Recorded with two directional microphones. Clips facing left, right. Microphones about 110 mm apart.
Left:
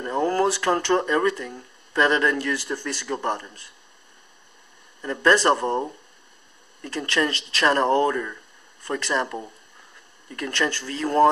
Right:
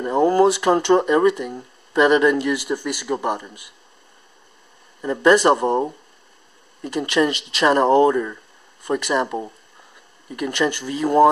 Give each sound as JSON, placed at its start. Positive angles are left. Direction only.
{"t": 0.0, "sound": "speech", "side_deg": -15}
{"t": 5.0, "sound": "speech", "side_deg": -15}